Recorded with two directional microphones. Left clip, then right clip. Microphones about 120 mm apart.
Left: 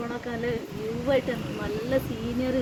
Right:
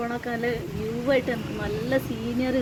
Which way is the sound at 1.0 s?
10° right (ahead or behind).